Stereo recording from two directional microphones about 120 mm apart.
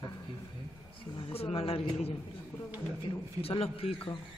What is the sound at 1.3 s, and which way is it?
Speech, 55° left (ahead or behind).